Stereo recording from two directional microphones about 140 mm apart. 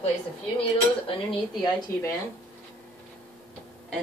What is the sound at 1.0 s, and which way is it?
Speech, 40° left (ahead or behind).